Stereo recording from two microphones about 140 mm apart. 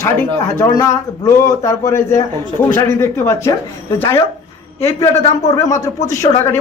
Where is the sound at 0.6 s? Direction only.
20° left (ahead or behind).